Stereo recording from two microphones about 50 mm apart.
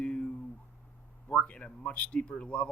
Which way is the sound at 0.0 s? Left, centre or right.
Left.